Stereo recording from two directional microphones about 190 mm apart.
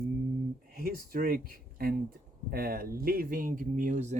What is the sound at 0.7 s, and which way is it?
Speech, 50° right (ahead or behind).